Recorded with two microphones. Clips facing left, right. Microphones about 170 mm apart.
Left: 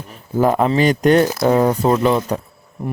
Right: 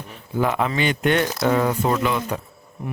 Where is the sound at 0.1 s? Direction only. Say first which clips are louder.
Left 6 dB; 40° left (ahead or behind).